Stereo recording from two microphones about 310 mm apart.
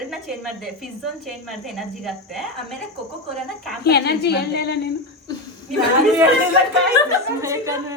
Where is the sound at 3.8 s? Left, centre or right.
Left.